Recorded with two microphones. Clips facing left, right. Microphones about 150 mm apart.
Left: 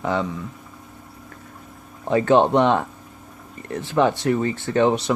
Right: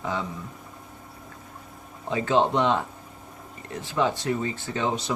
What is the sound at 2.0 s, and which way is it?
Speech, 60° left (ahead or behind).